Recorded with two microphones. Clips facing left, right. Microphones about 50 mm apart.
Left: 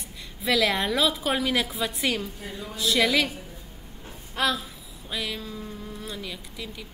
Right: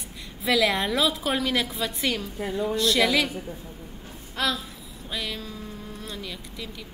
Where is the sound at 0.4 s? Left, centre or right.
Centre.